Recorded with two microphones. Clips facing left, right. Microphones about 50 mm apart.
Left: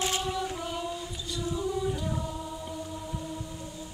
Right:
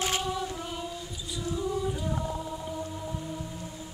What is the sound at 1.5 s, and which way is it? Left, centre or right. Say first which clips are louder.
Choir: right 1 dB; centre.